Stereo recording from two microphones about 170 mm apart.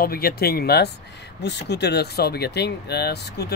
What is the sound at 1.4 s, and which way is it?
Speech, 90° left.